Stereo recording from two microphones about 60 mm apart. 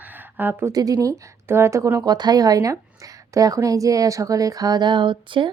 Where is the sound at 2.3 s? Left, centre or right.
Right.